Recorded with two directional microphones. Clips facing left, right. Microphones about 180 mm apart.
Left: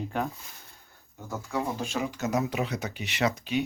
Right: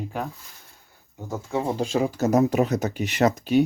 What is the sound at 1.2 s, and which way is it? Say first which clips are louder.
Speech: right 5 dB; 20° right (ahead or behind).